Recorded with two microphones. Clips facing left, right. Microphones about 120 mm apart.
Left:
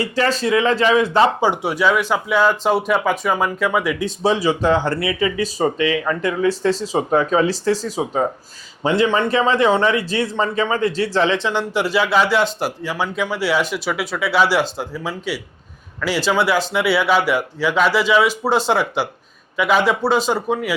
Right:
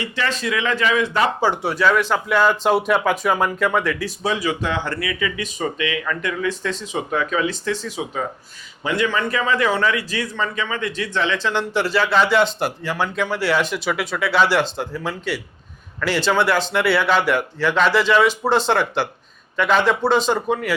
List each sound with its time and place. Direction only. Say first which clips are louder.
0.0 s speech: left 5 dB; 35° left (ahead or behind)
1.4 s speech: left 1 dB; 15° left (ahead or behind)
3.9 s a man's voice: left 5 dB; 25° left (ahead or behind)
11.4 s speech: left 1 dB; 10° left (ahead or behind)